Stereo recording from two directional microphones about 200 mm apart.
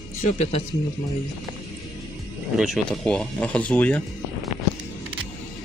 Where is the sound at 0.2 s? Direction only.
35° left (ahead or behind).